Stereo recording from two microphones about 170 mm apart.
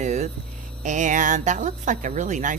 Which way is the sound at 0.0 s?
45° right (ahead or behind).